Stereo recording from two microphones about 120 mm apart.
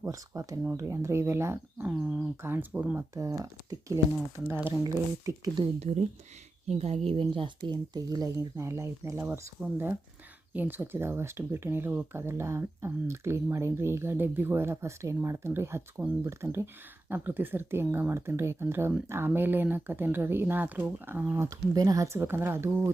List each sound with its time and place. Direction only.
0.0 s speech: 30° right (ahead or behind)
1.8 s speech: 10° right (ahead or behind)
2.4 s speech: 15° right (ahead or behind)
3.2 s speech: 30° right (ahead or behind)
4.4 s speech: 15° right (ahead or behind)
4.8 s speech: 35° right (ahead or behind)
5.8 s speech: 75° right (ahead or behind)
6.7 s speech: 60° right (ahead or behind); by 22.9 s 20° right (ahead or behind)